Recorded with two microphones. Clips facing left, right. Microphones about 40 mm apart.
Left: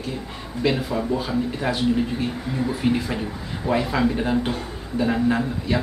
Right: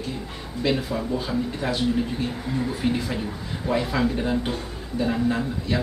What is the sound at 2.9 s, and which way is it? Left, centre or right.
A man's voice, centre.